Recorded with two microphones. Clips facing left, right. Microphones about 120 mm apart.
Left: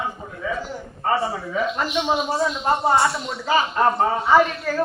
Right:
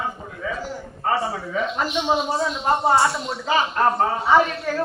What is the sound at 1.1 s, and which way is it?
Speech, centre (ahead or behind).